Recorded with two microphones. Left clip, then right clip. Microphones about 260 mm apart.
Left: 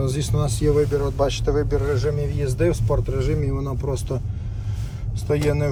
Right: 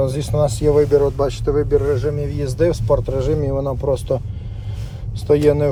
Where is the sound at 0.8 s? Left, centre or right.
Right.